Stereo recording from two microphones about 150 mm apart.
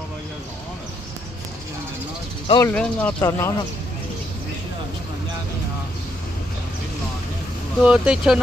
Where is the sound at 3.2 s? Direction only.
20° left (ahead or behind).